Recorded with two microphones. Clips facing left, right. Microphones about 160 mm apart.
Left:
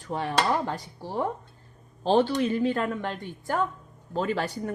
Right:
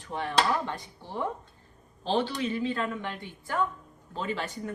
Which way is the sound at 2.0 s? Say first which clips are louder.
Left 6 dB; 45° left (ahead or behind).